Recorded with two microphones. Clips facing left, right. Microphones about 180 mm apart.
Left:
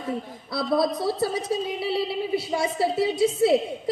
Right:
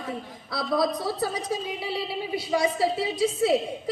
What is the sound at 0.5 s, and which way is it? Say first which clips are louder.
A woman's voice: left 2 dB; 25° left (ahead or behind).